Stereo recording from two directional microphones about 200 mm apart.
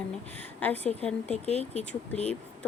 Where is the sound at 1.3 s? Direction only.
35° left (ahead or behind).